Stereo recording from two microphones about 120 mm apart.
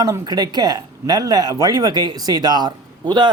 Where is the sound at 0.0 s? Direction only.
30° right (ahead or behind).